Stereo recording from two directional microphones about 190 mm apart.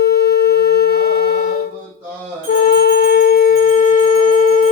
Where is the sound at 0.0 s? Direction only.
55° left (ahead or behind).